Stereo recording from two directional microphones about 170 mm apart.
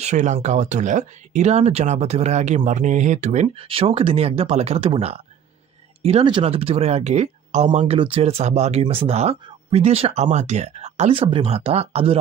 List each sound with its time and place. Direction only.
0.0 s speech: 45° right (ahead or behind)
7.8 s speech: 30° right (ahead or behind)